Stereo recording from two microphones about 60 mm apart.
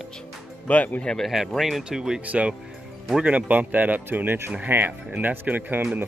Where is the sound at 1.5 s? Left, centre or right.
Centre.